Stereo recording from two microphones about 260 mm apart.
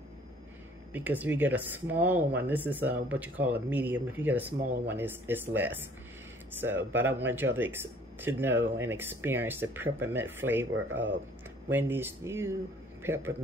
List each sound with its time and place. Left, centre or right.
0.9 s speech: centre
11.7 s speech: centre